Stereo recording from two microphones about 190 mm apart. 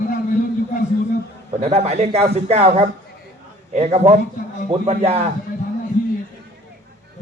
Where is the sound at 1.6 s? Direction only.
35° right (ahead or behind).